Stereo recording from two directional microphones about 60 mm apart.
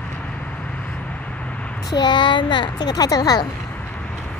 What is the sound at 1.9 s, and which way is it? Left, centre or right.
Speech, left.